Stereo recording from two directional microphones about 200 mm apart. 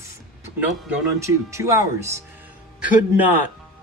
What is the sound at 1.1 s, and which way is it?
A man's voice, 15° right (ahead or behind).